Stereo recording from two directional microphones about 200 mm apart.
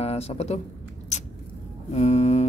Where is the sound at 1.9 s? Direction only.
35° left (ahead or behind).